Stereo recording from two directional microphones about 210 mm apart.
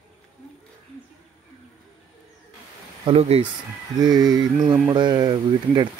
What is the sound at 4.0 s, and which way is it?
Speech, 20° right (ahead or behind).